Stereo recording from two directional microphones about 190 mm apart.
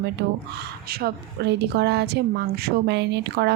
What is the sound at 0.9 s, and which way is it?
A woman's voice, 55° right (ahead or behind).